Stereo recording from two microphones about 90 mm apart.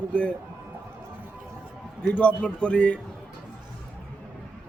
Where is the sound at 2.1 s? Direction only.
15° left (ahead or behind).